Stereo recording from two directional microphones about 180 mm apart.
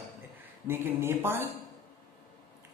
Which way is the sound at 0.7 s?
15° right (ahead or behind).